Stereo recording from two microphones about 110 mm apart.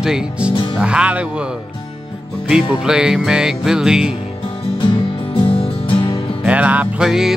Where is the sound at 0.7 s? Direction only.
10° right (ahead or behind).